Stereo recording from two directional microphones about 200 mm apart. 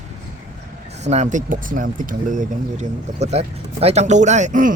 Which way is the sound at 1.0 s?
35° right (ahead or behind).